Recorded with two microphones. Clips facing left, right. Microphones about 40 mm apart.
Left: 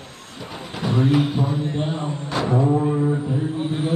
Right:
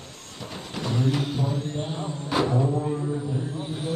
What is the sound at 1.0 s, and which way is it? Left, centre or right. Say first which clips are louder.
Vehicle: left 7 dB; left.